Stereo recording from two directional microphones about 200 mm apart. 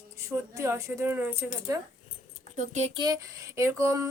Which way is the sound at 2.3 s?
35° right (ahead or behind).